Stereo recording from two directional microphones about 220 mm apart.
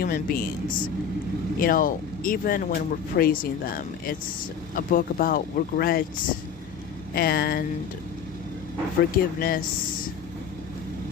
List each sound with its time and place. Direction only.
0.0 s speech: 40° left (ahead or behind)
7.1 s speech: 45° left (ahead or behind)
9.1 s speech: 40° left (ahead or behind)